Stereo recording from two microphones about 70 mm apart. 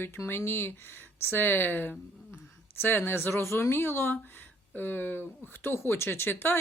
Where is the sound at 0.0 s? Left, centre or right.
Left.